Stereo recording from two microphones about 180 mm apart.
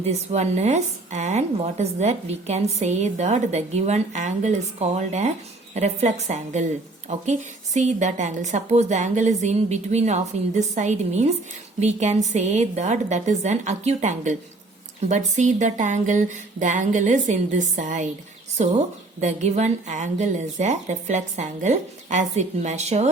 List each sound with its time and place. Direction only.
0.0 s speech: 40° right (ahead or behind)
19.2 s speech: 40° right (ahead or behind)